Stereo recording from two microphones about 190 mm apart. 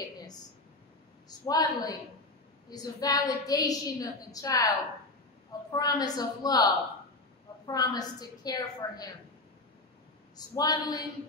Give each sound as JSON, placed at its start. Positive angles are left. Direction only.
{"t": 1.5, "sound": "a woman's voice", "side_deg": 20}
{"t": 10.3, "sound": "a woman's voice", "side_deg": 20}